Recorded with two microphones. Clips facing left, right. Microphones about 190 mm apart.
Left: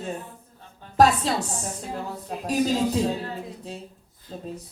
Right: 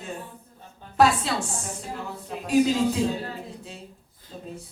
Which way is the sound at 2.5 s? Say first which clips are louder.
Right 2 dB; 40° left (ahead or behind).